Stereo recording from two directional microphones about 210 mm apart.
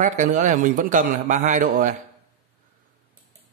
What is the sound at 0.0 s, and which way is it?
A man's voice, 35° right (ahead or behind).